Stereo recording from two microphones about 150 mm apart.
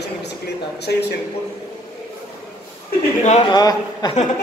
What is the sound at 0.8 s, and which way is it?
Speech, 90° left.